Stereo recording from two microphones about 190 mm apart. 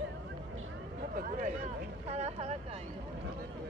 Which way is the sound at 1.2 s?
40° right (ahead or behind).